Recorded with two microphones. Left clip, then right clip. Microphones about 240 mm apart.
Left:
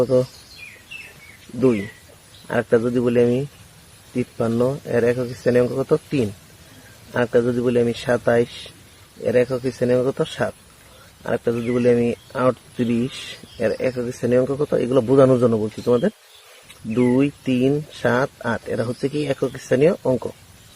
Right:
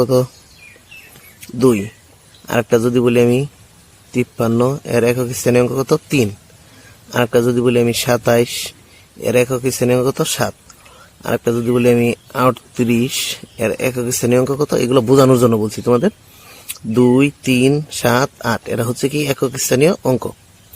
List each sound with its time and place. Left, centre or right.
0.0 s speech: right
2.5 s speech: right